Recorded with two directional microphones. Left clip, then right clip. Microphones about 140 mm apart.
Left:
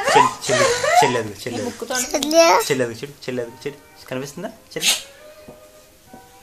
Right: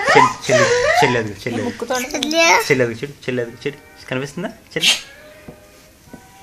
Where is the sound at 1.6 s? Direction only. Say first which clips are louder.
Right 3 dB; 40° right (ahead or behind).